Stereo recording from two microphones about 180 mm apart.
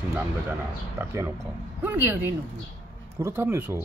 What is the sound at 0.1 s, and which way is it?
Speech, 10° right (ahead or behind).